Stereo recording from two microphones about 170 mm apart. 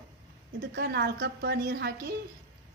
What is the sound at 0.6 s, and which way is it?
A woman's voice, 70° right (ahead or behind).